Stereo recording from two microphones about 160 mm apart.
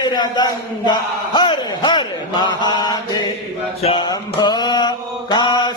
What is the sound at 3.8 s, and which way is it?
Mantra, 35° left (ahead or behind).